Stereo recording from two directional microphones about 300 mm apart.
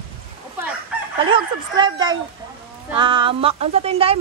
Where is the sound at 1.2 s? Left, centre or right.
Centre.